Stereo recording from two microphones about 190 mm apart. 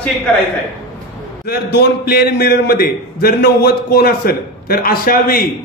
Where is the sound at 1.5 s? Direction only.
55° left (ahead or behind).